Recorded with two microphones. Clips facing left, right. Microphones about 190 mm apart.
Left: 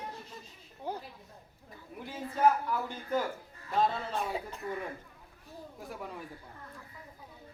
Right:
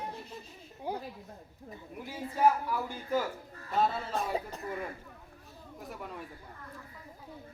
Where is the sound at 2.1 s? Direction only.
10° right (ahead or behind).